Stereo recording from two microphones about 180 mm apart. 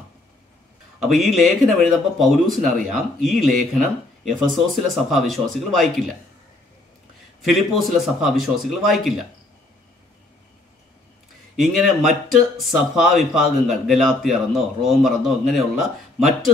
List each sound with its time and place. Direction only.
0.9 s speech: centre (ahead or behind)
7.4 s speech: centre (ahead or behind)
11.6 s speech: centre (ahead or behind)